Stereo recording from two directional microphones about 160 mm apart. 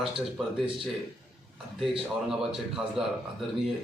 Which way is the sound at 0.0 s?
Centre (ahead or behind).